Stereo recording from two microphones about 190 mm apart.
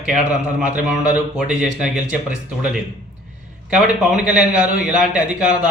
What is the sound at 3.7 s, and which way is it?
A man's voice, 5° right (ahead or behind).